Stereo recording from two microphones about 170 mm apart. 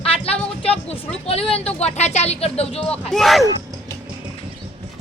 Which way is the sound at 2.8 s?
5° left (ahead or behind).